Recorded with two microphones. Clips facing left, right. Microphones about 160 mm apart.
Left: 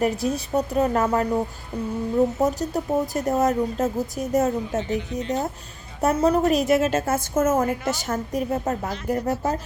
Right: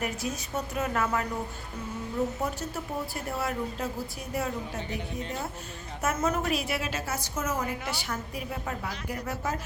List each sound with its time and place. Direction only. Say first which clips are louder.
0.0 s speech: left 10 dB; 35° left (ahead or behind)
2.4 s a woman's voice: left 10 dB; 40° left (ahead or behind)